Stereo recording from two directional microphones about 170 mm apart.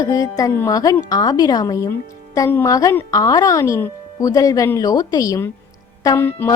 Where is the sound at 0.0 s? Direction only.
20° left (ahead or behind).